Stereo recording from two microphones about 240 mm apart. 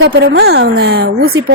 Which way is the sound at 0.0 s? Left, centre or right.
Right.